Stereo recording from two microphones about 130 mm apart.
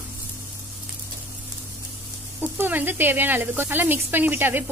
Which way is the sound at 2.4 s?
15° right (ahead or behind).